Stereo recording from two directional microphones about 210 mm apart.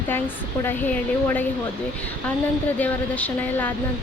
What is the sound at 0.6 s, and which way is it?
Speech, 10° left (ahead or behind).